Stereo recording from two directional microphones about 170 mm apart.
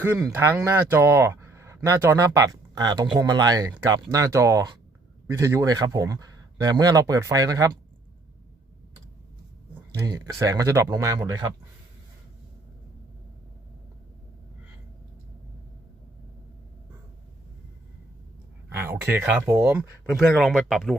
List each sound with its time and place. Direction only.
0.0 s speech: 15° right (ahead or behind)
10.4 s speech: 20° right (ahead or behind)
18.8 s speech: 10° right (ahead or behind)
20.1 s speech: centre (ahead or behind)